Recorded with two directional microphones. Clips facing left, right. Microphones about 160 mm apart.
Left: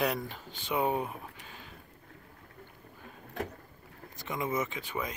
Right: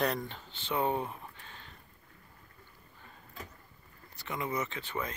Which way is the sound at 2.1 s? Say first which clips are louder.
Left 6 dB; 65° left (ahead or behind).